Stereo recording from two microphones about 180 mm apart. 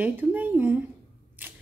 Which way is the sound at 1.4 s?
10° right (ahead or behind).